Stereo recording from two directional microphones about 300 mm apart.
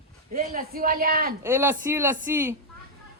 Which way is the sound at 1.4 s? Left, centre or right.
Centre.